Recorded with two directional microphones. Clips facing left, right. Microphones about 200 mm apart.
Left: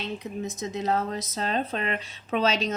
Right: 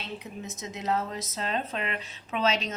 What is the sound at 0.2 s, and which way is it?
Speech, 35° left (ahead or behind).